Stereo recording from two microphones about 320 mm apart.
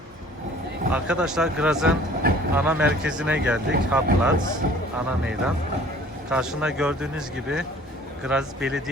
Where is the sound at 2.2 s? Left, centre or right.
Right.